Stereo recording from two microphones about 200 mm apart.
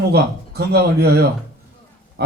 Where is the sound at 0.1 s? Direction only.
55° right (ahead or behind).